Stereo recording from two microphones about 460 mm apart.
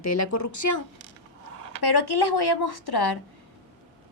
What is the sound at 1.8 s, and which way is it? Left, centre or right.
A woman's voice, left.